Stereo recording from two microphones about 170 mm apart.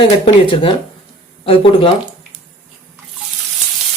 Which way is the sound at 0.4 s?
30° left (ahead or behind).